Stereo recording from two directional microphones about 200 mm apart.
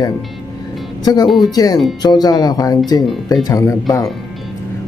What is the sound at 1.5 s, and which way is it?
Speech, 20° left (ahead or behind).